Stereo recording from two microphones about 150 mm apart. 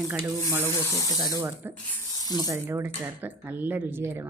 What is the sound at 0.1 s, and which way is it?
A woman's voice, 15° right (ahead or behind).